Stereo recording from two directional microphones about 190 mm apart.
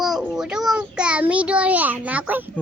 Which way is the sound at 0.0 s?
5° right (ahead or behind).